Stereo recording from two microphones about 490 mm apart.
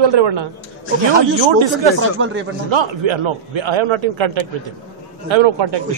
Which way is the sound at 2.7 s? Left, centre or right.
Right.